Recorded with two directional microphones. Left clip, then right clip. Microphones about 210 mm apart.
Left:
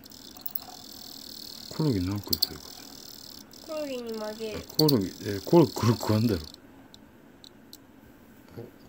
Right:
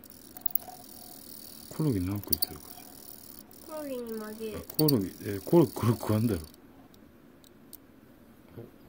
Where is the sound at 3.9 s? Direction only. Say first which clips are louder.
Left 3 dB; 50° right (ahead or behind).